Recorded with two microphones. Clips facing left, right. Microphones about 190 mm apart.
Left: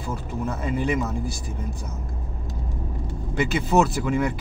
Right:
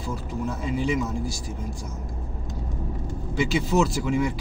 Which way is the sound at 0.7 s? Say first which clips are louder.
Left 1 dB; 55° left (ahead or behind).